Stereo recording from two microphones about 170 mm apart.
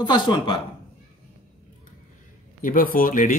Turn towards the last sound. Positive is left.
turn(degrees=55)  # may be behind; listen again after turning